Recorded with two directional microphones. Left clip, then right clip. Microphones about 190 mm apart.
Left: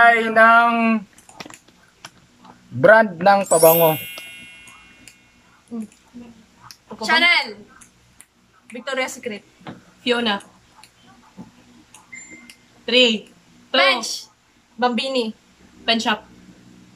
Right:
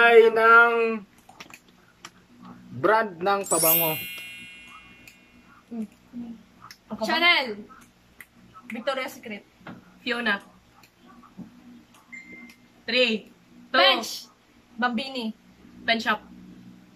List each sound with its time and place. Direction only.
0.2 s speech: 50° left (ahead or behind)
2.8 s speech: 50° left (ahead or behind)
3.5 s a woman's voice: centre (ahead or behind)
4.2 s a sound: centre (ahead or behind)
5.7 s speech: 10° left (ahead or behind)
7.0 s a woman's voice: 15° right (ahead or behind)
8.7 s a woman's voice: centre (ahead or behind)
10.0 s speech: 15° left (ahead or behind)
12.8 s speech: 10° left (ahead or behind)
13.7 s a woman's voice: 15° right (ahead or behind)
14.8 s a woman's voice: centre (ahead or behind)
15.8 s speech: 15° left (ahead or behind)